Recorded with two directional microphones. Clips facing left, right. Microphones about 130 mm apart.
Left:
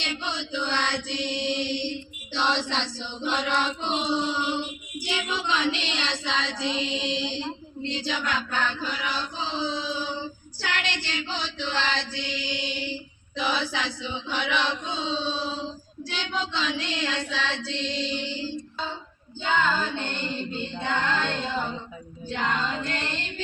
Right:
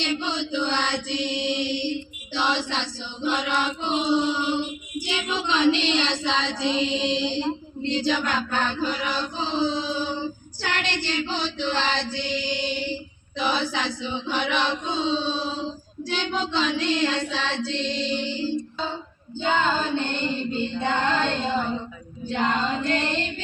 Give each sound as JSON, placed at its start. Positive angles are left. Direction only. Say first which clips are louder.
{"t": 0.0, "sound": "chant", "louder": "right 6 dB", "side_deg": -25}
{"t": 5.0, "sound": "child singing", "louder": "right 1 dB", "side_deg": -20}
{"t": 8.0, "sound": "child singing", "louder": "right 3 dB", "side_deg": -50}
{"t": 19.4, "sound": "child singing", "louder": "right 2 dB", "side_deg": -25}
{"t": 20.8, "sound": "female singing", "louder": "right 2 dB", "side_deg": -30}
{"t": 22.3, "sound": "child singing", "louder": "right 4 dB", "side_deg": -30}